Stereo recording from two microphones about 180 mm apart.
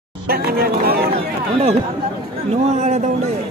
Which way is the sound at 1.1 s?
35° right (ahead or behind).